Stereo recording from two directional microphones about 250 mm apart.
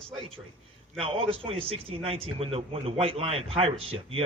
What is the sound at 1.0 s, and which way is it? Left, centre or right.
A man's voice, right.